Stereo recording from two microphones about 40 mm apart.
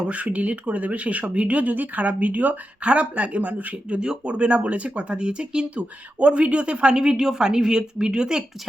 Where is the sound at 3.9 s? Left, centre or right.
Right.